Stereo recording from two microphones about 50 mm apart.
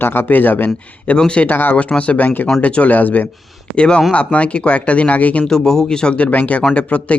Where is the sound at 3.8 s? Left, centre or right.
Left.